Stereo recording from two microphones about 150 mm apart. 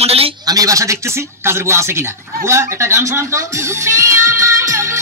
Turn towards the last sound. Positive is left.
turn(degrees=-20)  # may be behind; listen again after turning